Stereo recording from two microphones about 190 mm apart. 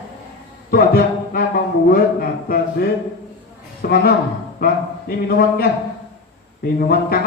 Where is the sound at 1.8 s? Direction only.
50° left (ahead or behind).